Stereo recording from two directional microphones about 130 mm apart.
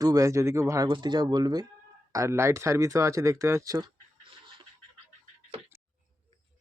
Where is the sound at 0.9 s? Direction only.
35° right (ahead or behind).